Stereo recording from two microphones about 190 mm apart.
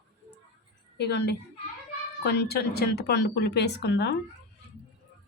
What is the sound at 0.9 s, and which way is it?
Speech, 60° left (ahead or behind).